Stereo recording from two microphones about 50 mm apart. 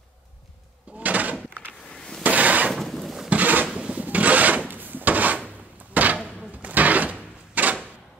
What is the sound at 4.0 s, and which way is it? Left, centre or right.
Wood, right.